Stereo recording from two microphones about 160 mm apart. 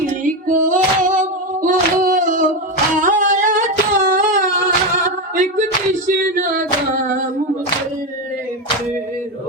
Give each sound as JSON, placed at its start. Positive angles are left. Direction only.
{"t": 0.0, "sound": "female singing", "side_deg": -55}
{"t": 2.9, "sound": "humming", "side_deg": -50}
{"t": 5.0, "sound": "a sound", "side_deg": -55}